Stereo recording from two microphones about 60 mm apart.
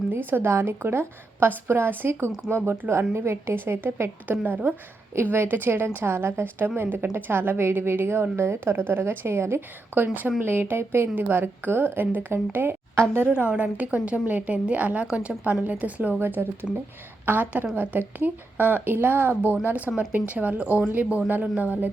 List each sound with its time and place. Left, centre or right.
0.1 s a woman's voice: right
4.3 s a woman's voice: right
11.1 s a woman's voice: right
13.2 s a woman's voice: centre
16.2 s a woman's voice: right